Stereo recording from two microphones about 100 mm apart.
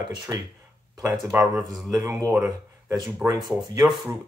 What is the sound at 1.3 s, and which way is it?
Speech, 10° right (ahead or behind).